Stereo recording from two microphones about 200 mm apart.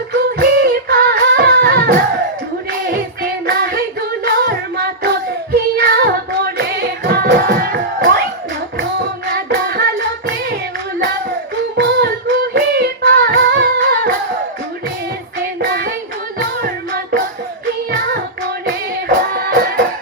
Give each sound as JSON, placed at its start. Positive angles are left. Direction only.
{"t": 0.3, "sound": "music", "side_deg": -50}
{"t": 3.4, "sound": "female singing", "side_deg": -50}
{"t": 4.3, "sound": "child singing", "side_deg": -50}
{"t": 5.7, "sound": "music", "side_deg": -50}
{"t": 9.2, "sound": "music", "side_deg": -50}
{"t": 11.8, "sound": "female singing", "side_deg": -55}
{"t": 15.6, "sound": "child singing", "side_deg": -50}
{"t": 16.4, "sound": "music", "side_deg": -45}
{"t": 19.0, "sound": "music", "side_deg": -50}